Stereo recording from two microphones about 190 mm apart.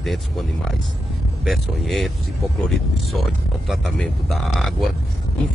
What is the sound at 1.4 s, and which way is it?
Speech, centre (ahead or behind).